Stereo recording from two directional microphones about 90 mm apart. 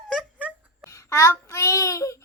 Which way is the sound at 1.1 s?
35° left (ahead or behind).